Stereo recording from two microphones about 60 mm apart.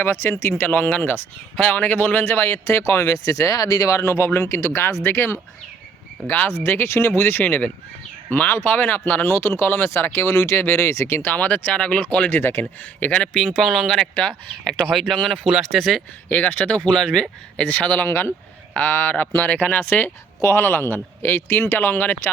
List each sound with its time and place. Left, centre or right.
0.0 s speech: left
0.6 s a man's voice: left
3.0 s speech: left
6.2 s speech: left
6.5 s speech: left
7.2 s a man's voice: left
9.2 s speech: left
11.3 s speech: left
12.3 s a man's voice: left
13.0 s speech: left
13.6 s speech: centre
15.4 s speech: centre
16.3 s speech: left; by 17.2 s centre
17.6 s a man's voice: left